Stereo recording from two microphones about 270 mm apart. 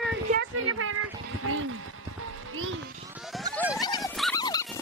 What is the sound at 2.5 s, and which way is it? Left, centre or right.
Music, right.